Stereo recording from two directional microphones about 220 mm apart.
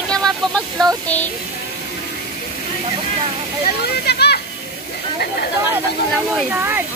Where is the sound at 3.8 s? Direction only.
50° left (ahead or behind).